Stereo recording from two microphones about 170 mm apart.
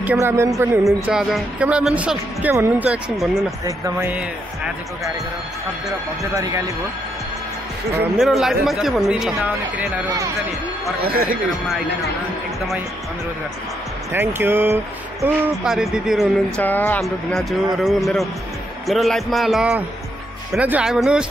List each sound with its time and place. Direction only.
0.0 s speech: 10° right (ahead or behind)
0.8 s speech: centre (ahead or behind)
3.6 s speech: 15° right (ahead or behind)
6.3 s speech: 20° right (ahead or behind)
8.2 s speech: centre (ahead or behind)
11.1 s speech: 60° right (ahead or behind)
14.1 s speech: 15° right (ahead or behind)
16.6 s speech: 10° left (ahead or behind)